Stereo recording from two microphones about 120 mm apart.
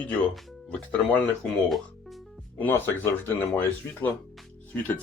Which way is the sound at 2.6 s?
15° left (ahead or behind).